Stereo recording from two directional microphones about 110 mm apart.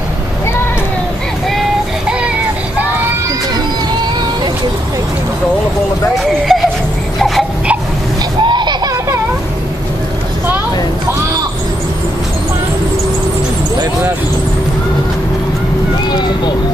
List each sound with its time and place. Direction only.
6.1 s a sound: centre (ahead or behind)
8.5 s baby laughter: 45° right (ahead or behind)
16.1 s vehicle: 40° left (ahead or behind)